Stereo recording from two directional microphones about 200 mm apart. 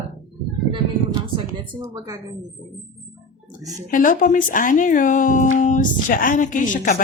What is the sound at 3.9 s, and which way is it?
Speech, 40° left (ahead or behind).